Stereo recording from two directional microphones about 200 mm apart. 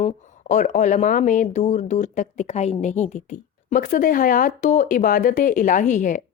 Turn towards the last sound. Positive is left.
turn(degrees=40)  # may be behind; listen again after turning